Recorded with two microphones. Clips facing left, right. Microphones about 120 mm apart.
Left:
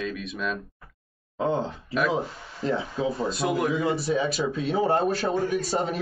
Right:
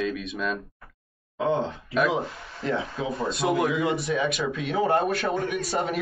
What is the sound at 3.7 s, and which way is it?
Speech, 35° left (ahead or behind).